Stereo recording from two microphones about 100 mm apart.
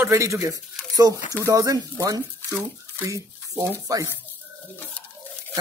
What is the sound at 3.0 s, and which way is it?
Speech, 35° right (ahead or behind).